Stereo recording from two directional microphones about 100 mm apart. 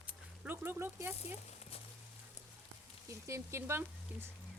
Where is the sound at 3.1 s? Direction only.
30° right (ahead or behind).